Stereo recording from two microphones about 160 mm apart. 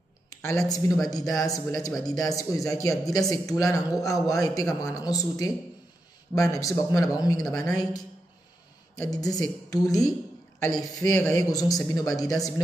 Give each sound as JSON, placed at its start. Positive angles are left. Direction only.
{"t": 0.4, "sound": "speech", "side_deg": 20}
{"t": 9.1, "sound": "speech", "side_deg": 20}